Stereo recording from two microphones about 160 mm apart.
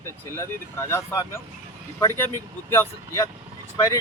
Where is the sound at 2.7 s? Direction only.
15° left (ahead or behind).